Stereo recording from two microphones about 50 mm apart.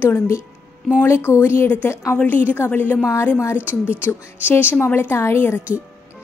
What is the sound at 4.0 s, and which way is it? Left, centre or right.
A woman's voice, left.